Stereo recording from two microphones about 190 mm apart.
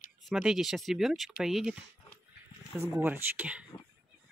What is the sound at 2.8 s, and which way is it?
Speech, 10° right (ahead or behind).